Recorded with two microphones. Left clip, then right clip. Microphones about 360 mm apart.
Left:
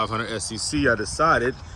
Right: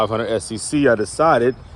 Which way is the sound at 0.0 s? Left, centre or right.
Centre.